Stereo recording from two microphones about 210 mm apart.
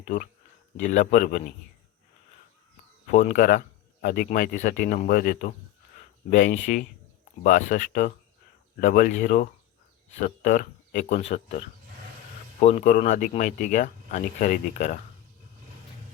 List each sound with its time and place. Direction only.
0.8 s speech: 40° left (ahead or behind)
3.1 s speech: 40° left (ahead or behind)